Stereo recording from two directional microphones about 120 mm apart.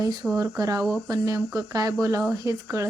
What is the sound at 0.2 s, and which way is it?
Speech, 5° right (ahead or behind).